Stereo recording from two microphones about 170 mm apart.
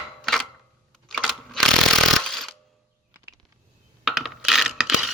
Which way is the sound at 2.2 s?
Centre (ahead or behind).